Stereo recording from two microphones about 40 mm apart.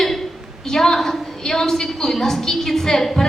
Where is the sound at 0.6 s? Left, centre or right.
Centre.